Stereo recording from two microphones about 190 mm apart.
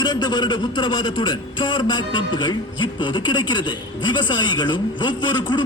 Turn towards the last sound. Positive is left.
turn(degrees=25)  # may be behind; listen again after turning